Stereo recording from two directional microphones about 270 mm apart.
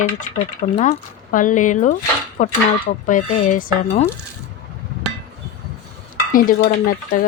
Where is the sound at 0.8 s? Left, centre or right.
Left.